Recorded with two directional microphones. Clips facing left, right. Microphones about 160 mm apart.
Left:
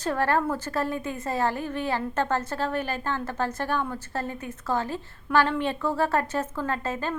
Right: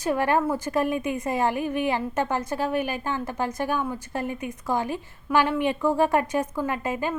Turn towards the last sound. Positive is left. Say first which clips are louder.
# right 2 dB
turn(degrees=-15)  # may be behind; listen again after turning